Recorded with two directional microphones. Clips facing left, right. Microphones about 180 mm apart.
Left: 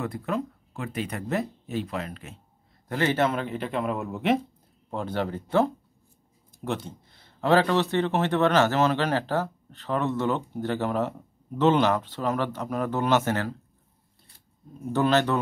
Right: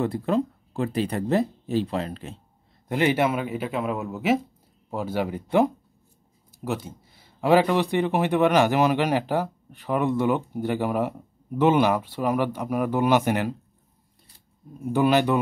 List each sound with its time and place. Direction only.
0.0 s speech: 30° right (ahead or behind)
2.9 s a man's voice: 15° right (ahead or behind)
14.9 s speech: 10° right (ahead or behind)